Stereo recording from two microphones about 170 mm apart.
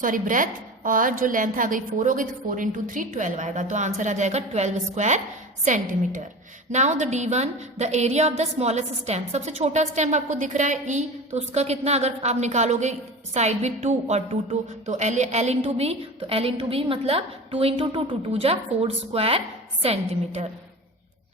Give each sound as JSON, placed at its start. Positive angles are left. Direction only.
{"t": 0.0, "sound": "a woman's voice", "side_deg": -50}